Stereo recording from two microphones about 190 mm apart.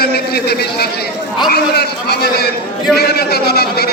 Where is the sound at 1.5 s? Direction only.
55° left (ahead or behind).